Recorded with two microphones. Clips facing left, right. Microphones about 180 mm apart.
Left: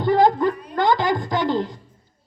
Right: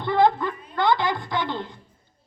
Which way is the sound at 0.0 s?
40° left (ahead or behind).